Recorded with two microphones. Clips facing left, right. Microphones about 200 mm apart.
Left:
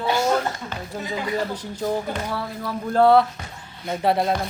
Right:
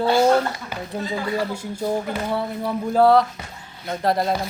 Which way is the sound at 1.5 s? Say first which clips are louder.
Right 1 dB; 10° right (ahead or behind).